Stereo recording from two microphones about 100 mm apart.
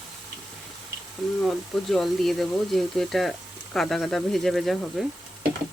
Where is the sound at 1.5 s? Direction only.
Centre (ahead or behind).